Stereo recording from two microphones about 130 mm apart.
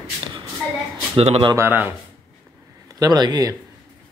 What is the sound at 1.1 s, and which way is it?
Speech, 50° right (ahead or behind).